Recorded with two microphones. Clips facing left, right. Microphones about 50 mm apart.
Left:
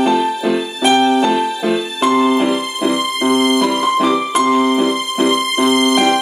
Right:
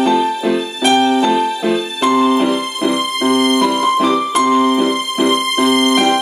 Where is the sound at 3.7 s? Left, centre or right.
Centre.